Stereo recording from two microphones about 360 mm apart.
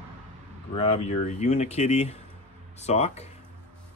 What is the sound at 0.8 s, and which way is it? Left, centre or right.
Speech, centre.